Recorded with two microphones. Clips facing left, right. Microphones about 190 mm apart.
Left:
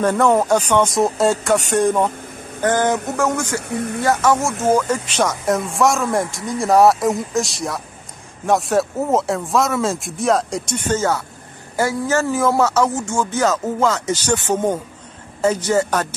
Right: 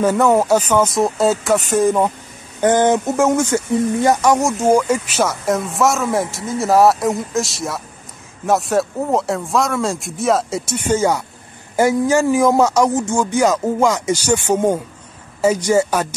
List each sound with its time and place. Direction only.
0.0 s speech: 5° right (ahead or behind)
2.6 s speech: 20° right (ahead or behind)